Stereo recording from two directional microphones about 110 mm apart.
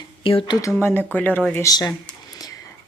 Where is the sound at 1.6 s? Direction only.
35° left (ahead or behind).